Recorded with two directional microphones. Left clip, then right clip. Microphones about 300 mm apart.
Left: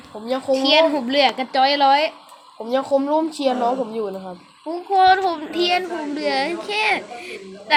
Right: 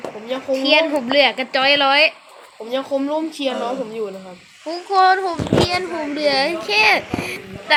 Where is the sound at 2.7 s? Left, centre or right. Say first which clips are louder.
Left 2 dB; left.